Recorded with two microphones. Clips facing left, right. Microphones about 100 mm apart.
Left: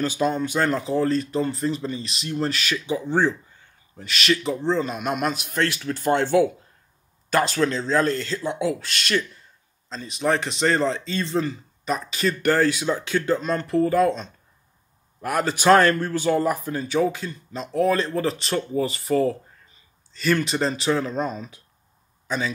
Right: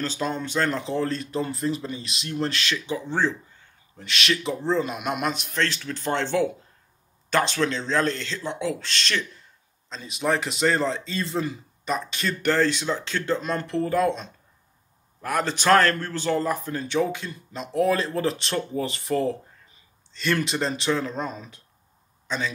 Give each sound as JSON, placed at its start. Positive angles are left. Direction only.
{"t": 0.0, "sound": "a man's voice", "side_deg": 10}
{"t": 4.0, "sound": "a man's voice", "side_deg": 0}